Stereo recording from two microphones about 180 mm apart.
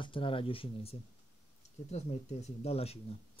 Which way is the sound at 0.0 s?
30° left (ahead or behind).